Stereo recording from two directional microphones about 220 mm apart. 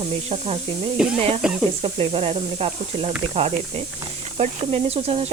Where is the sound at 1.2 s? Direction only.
30° right (ahead or behind).